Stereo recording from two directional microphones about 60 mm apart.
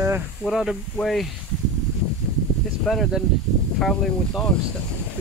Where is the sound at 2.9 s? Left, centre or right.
Centre.